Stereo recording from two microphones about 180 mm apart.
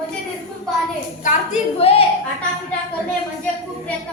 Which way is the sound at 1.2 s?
40° left (ahead or behind).